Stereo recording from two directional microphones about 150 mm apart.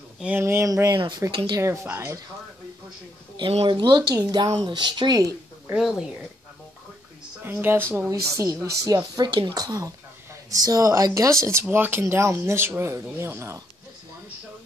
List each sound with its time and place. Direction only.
0.2 s speech: 15° right (ahead or behind); by 1.6 s 30° right (ahead or behind)
1.6 s speech: 20° right (ahead or behind)
3.3 s speech: 35° right (ahead or behind)
5.7 s speech: 5° right (ahead or behind)
7.4 s speech: 15° right (ahead or behind)